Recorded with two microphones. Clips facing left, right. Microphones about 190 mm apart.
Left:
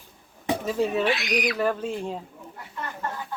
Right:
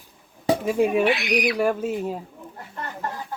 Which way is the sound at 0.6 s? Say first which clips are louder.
Right 3 dB; 10° right (ahead or behind).